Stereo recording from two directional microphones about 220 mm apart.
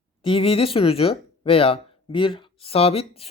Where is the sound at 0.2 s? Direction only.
25° left (ahead or behind).